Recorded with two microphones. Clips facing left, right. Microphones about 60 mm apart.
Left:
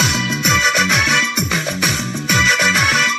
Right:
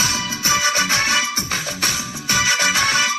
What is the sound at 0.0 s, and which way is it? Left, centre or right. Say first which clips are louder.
Music: left 5 dB; left.